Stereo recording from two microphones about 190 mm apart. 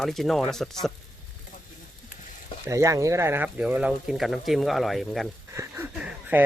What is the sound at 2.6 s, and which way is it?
Speech, 15° right (ahead or behind).